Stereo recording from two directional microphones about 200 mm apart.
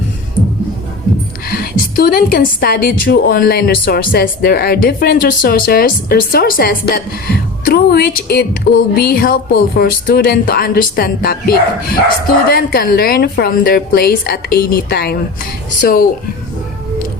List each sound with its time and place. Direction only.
1.5 s a woman's voice: 50° left (ahead or behind)